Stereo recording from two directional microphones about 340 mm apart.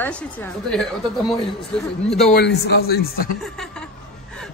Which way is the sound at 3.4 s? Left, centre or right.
Centre.